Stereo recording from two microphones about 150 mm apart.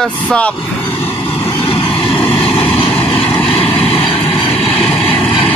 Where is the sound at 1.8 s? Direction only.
5° left (ahead or behind).